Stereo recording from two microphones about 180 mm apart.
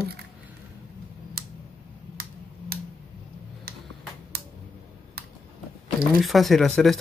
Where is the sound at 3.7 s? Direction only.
60° right (ahead or behind).